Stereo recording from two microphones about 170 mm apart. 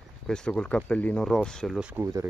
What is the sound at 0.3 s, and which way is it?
Speech, 5° left (ahead or behind).